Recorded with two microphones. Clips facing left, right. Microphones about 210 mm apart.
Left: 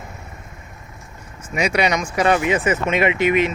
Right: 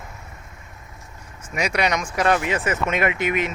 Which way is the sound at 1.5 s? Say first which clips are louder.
Left 3 dB; centre (ahead or behind).